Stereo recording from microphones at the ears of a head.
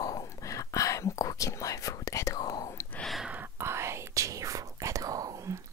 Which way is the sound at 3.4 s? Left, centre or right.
Right.